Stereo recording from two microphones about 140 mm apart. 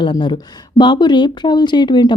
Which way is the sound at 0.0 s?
35° left (ahead or behind).